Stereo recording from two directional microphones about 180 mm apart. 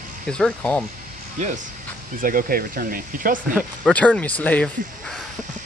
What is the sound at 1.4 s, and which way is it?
Speech, 40° right (ahead or behind).